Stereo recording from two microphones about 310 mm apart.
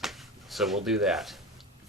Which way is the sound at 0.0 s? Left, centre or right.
Centre.